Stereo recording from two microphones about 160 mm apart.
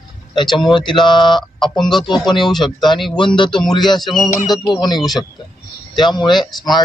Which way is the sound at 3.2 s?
30° left (ahead or behind).